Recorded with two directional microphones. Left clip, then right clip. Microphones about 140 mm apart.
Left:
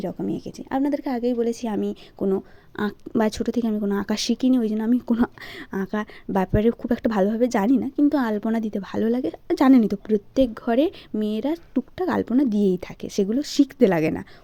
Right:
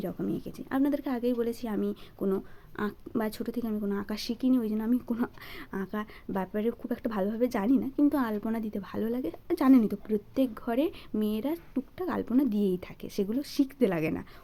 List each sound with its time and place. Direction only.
0.0 s a woman's voice: 35° left (ahead or behind)
1.6 s a woman's voice: 45° left (ahead or behind)
2.7 s a woman's voice: 55° left (ahead or behind)